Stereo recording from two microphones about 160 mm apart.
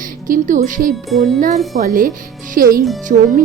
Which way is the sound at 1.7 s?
60° right (ahead or behind).